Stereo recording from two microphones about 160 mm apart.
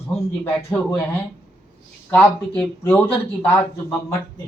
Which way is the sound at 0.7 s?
10° left (ahead or behind).